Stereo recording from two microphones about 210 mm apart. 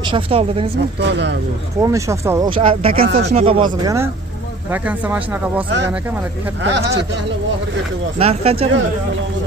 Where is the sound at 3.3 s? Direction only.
25° right (ahead or behind); by 5.7 s 10° right (ahead or behind).